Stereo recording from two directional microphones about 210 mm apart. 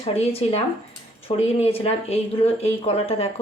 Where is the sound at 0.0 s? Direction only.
30° left (ahead or behind).